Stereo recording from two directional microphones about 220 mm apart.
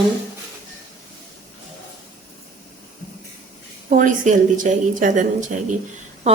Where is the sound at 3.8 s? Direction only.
35° right (ahead or behind).